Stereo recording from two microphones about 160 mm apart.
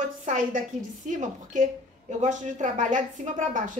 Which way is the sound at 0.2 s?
50° right (ahead or behind).